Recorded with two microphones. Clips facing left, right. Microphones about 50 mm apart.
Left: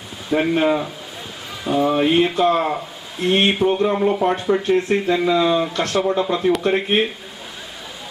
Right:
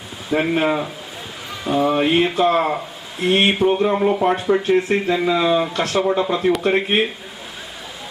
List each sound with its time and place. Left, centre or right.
0.3 s speech: centre